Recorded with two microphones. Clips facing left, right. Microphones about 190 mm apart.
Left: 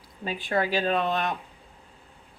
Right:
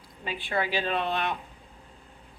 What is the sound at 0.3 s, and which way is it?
A woman's voice, 45° left (ahead or behind).